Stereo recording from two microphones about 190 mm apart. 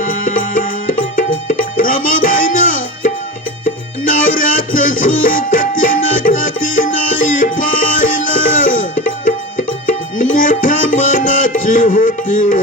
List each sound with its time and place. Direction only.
0.0 s music: 45° left (ahead or behind)